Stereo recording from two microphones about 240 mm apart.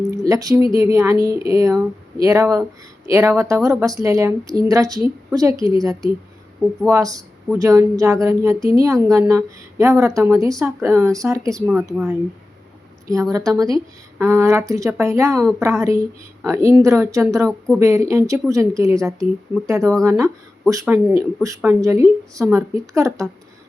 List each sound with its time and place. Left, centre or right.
0.3 s speech: centre
14.2 s speech: centre